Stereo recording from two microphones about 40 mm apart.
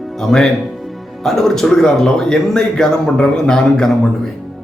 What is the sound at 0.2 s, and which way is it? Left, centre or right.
Speech, centre.